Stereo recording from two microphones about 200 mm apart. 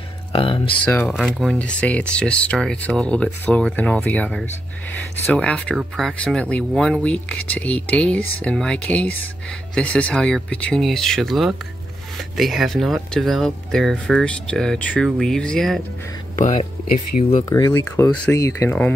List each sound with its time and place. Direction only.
0.3 s speech: 25° left (ahead or behind)
0.8 s speech: 5° left (ahead or behind)
16.3 s speech: 40° left (ahead or behind)
17.5 s speech: 20° left (ahead or behind)